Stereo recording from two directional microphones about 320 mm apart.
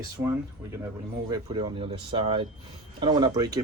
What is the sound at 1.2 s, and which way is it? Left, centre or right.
Speech, centre.